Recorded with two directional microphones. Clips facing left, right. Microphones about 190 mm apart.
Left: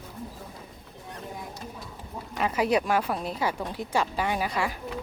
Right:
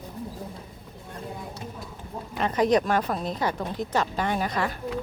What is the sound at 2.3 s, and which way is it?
Speech, 5° left (ahead or behind).